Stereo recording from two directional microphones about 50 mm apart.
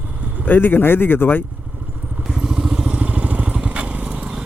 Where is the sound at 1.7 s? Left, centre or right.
Right.